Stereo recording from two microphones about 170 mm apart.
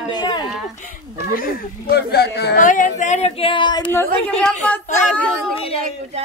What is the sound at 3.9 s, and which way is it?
A woman's voice, 10° left (ahead or behind).